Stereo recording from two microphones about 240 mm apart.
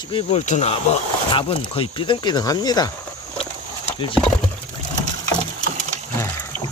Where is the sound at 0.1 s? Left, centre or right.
Left.